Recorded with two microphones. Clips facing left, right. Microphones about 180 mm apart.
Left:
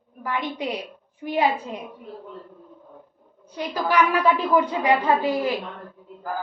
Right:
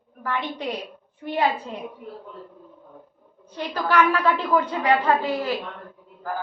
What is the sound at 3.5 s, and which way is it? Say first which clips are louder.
A woman's voice: even; 10° left (ahead or behind).